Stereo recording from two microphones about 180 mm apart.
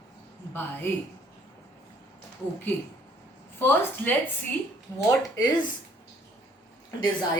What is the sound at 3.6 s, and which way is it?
Speech, 10° left (ahead or behind).